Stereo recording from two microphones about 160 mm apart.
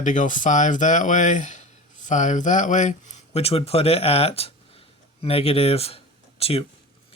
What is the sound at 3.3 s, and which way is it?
Speech, 40° left (ahead or behind).